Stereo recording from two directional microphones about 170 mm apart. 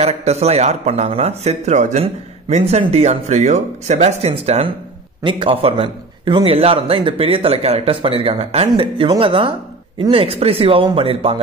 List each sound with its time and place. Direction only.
0.0 s a man's voice: 40° right (ahead or behind)